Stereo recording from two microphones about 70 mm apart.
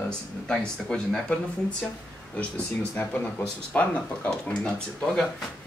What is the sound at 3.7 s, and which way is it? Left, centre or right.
Speech, left.